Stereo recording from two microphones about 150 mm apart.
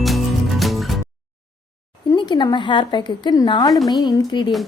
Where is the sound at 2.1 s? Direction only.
30° left (ahead or behind).